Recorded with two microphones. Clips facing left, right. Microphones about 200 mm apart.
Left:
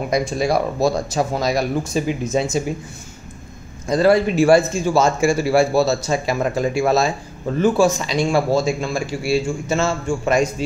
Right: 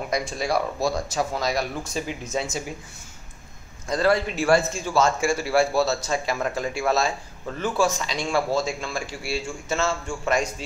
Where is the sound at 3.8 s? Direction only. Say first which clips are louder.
Left 7 dB; 10° left (ahead or behind).